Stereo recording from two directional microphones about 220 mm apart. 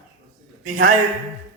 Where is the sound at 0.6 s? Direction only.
35° right (ahead or behind).